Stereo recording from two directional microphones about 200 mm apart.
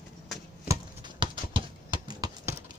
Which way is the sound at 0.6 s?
25° right (ahead or behind).